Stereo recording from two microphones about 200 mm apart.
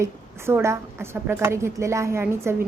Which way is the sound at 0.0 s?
15° right (ahead or behind).